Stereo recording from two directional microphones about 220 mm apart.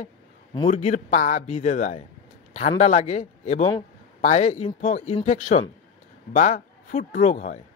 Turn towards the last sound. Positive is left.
turn(degrees=35)  # may be behind; listen again after turning